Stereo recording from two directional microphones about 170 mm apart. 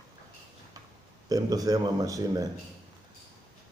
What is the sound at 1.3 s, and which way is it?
Speech, 20° right (ahead or behind).